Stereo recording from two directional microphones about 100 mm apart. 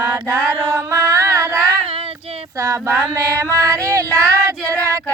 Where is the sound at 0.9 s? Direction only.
30° right (ahead or behind).